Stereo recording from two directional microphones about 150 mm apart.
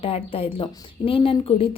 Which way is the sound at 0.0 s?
40° left (ahead or behind).